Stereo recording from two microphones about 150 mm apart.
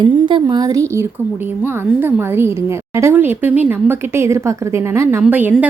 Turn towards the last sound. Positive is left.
turn(degrees=-10)  # may be behind; listen again after turning